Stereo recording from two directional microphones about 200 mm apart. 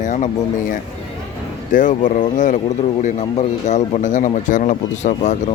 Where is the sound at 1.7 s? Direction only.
40° left (ahead or behind).